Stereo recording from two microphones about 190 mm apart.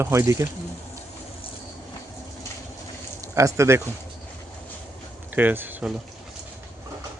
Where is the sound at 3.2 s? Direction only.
15° right (ahead or behind).